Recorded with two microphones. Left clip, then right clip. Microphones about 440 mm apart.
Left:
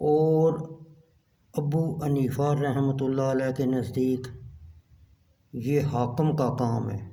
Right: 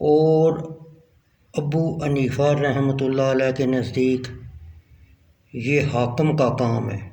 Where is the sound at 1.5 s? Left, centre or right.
Left.